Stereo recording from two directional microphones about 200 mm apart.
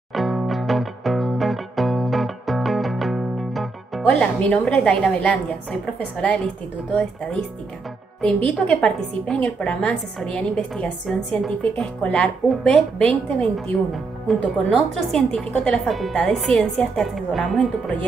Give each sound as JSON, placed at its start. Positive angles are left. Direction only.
{"t": 0.1, "sound": "music", "side_deg": 0}
{"t": 8.2, "sound": "a woman's voice", "side_deg": 5}